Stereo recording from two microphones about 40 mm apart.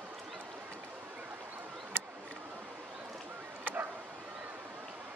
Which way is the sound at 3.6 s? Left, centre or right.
Right.